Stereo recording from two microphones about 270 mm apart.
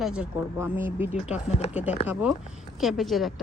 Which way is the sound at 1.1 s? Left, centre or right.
Left.